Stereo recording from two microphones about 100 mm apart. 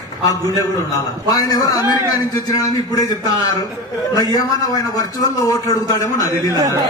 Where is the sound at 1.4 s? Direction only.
40° left (ahead or behind).